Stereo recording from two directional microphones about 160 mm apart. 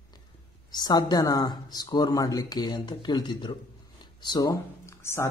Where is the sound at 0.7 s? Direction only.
25° left (ahead or behind).